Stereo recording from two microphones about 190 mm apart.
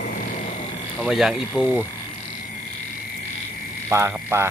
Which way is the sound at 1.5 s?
10° left (ahead or behind).